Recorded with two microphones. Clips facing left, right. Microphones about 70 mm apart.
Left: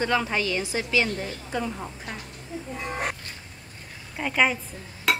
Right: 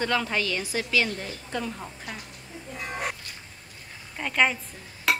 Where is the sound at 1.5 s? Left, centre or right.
Centre.